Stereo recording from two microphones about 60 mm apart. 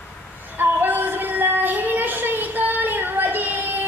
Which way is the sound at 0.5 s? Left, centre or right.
Right.